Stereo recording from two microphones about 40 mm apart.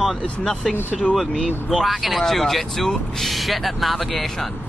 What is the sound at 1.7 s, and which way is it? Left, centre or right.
Speech, centre.